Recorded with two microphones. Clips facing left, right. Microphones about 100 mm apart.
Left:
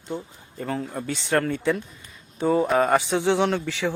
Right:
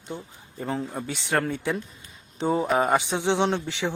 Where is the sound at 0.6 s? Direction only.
10° right (ahead or behind).